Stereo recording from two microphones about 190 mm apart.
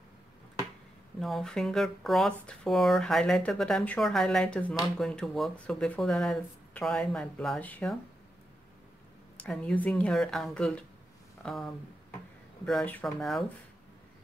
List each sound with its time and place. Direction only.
1.2 s speech: centre (ahead or behind)
9.4 s speech: 5° left (ahead or behind)